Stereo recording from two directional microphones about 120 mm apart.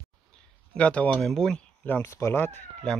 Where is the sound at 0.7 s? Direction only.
10° left (ahead or behind).